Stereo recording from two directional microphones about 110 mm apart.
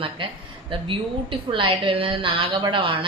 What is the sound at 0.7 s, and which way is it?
A woman's voice, 50° right (ahead or behind).